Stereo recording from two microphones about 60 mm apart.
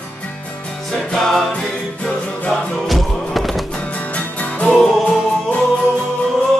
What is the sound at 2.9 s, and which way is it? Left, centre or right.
Music, centre.